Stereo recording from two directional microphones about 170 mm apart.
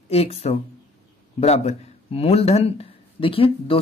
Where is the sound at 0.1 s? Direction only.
35° left (ahead or behind).